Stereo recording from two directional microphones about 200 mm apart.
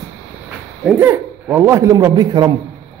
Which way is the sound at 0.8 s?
10° right (ahead or behind).